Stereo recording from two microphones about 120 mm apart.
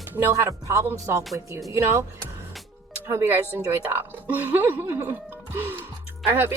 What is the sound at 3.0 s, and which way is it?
Speech, 20° right (ahead or behind).